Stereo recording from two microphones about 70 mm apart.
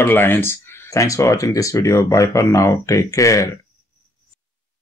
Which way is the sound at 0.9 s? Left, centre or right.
Left.